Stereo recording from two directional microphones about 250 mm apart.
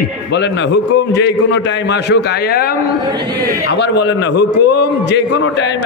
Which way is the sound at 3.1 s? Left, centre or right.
Centre.